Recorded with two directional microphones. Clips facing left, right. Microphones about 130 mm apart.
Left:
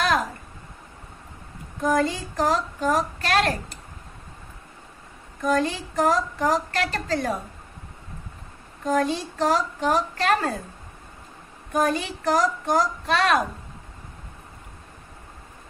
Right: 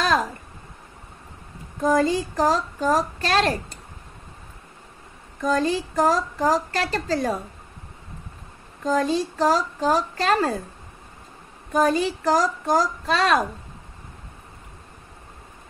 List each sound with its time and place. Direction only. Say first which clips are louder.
1.8 s a woman's voice: right 3 dB; 30° right (ahead or behind)
5.5 s a woman's voice: right 1 dB; 35° right (ahead or behind)
8.8 s a woman's voice: right 1 dB; 35° right (ahead or behind)
11.7 s a woman's voice: right 3 dB; 30° right (ahead or behind)